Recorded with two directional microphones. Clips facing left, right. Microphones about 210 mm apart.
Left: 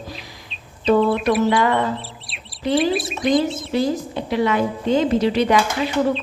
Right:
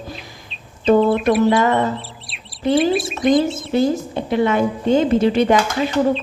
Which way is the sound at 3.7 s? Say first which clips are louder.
Right 4 dB; 50° right (ahead or behind).